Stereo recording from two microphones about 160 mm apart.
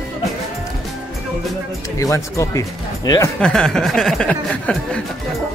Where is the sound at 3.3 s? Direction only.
5° left (ahead or behind).